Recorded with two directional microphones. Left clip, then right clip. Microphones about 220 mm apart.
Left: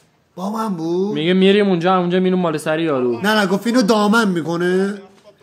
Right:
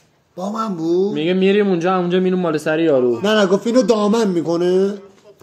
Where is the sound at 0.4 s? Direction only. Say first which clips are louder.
Right 1 dB; 25° left (ahead or behind).